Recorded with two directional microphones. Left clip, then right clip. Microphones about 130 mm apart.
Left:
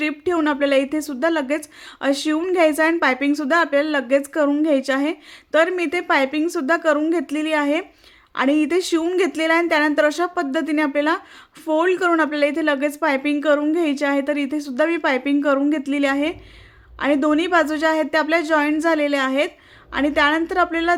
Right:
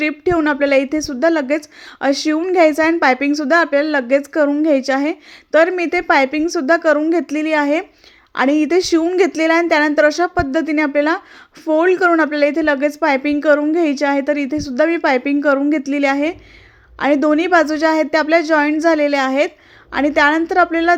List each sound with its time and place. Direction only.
0.0 s a woman's voice: 25° right (ahead or behind)